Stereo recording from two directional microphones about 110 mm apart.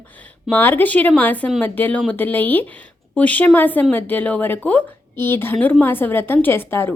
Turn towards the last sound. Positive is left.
turn(degrees=20)  # may be behind; listen again after turning